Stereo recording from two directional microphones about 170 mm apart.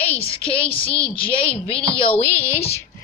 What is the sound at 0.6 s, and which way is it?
Speech, 35° left (ahead or behind).